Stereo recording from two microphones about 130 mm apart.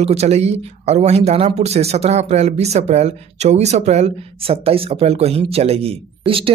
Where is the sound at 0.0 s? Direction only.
55° right (ahead or behind).